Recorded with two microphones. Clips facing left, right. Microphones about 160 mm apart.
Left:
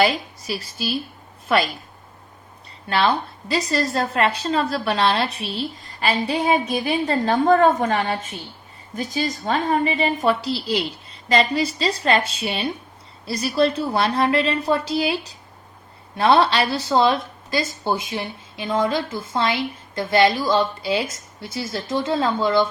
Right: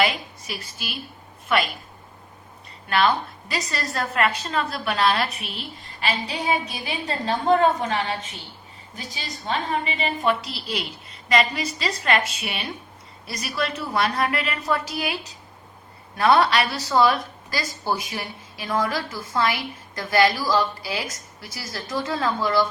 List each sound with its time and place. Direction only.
0.0 s a woman's voice: 35° left (ahead or behind)
2.9 s a woman's voice: 30° left (ahead or behind)